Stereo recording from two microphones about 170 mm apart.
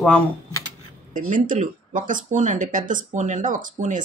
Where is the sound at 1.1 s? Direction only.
50° right (ahead or behind).